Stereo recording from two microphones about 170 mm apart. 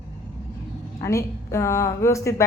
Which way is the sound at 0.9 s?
15° left (ahead or behind).